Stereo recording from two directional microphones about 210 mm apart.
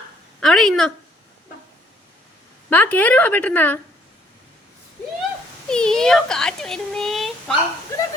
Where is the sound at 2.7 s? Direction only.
10° left (ahead or behind).